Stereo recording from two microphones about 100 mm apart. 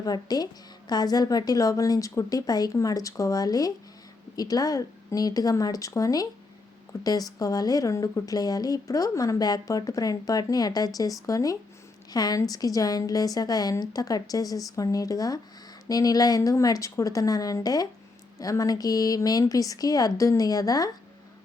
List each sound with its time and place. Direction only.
0.0 s speech: 40° left (ahead or behind)